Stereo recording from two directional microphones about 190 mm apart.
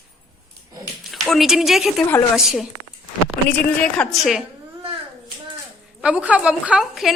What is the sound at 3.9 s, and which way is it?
Speech, centre (ahead or behind).